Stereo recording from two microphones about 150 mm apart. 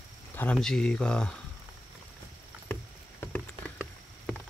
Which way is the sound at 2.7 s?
10° left (ahead or behind).